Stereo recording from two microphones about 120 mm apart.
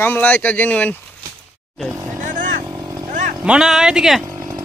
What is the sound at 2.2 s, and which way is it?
Vehicle, 90° right.